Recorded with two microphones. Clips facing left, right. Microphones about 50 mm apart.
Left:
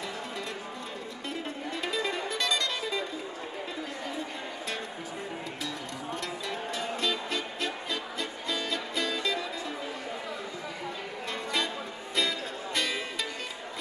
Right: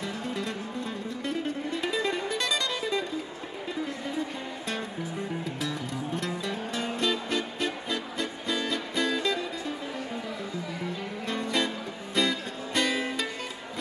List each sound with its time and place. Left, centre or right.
1.8 s music: centre
6.1 s music: centre
11.2 s music: centre